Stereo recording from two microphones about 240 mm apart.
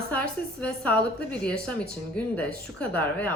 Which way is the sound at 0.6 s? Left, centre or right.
Centre.